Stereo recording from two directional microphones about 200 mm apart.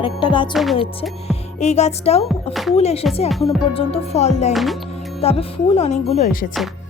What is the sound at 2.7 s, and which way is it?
Speech, 30° left (ahead or behind).